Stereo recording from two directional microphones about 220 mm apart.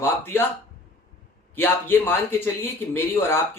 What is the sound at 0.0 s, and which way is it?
Speech, 10° left (ahead or behind).